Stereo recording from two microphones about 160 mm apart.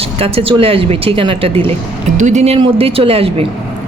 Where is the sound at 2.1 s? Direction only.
50° right (ahead or behind).